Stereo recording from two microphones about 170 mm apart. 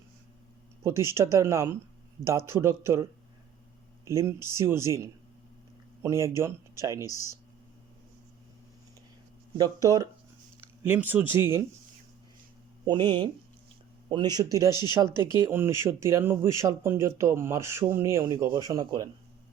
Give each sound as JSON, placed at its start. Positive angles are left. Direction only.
{"t": 0.8, "sound": "speech", "side_deg": -15}
{"t": 7.0, "sound": "speech", "side_deg": 20}
{"t": 9.6, "sound": "speech", "side_deg": -20}
{"t": 12.8, "sound": "speech", "side_deg": -25}
{"t": 14.7, "sound": "speech", "side_deg": 25}
{"t": 14.9, "sound": "speech", "side_deg": -15}